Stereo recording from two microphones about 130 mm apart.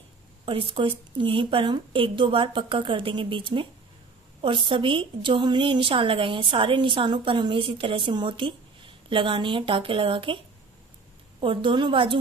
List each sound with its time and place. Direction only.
0.5 s a woman's voice: 40° right (ahead or behind)
11.4 s a woman's voice: 40° right (ahead or behind)